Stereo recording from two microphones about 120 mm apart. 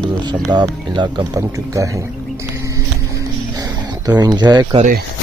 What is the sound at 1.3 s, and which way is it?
Speech, 25° right (ahead or behind).